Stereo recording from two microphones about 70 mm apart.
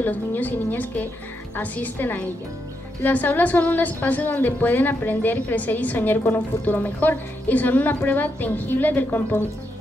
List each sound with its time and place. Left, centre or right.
0.0 s a woman's voice: left